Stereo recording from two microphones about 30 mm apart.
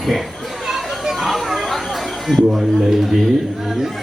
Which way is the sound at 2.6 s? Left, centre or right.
Centre.